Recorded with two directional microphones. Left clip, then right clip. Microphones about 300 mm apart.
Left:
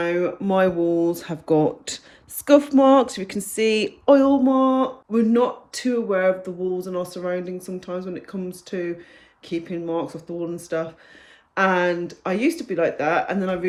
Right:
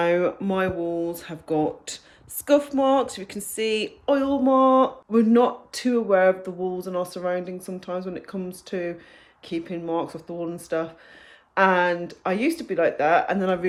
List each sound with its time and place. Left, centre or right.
0.0 s speech: centre
0.4 s speech: centre
4.4 s speech: centre